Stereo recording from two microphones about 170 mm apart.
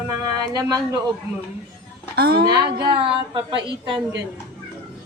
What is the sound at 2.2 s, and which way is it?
Speech, 60° right (ahead or behind).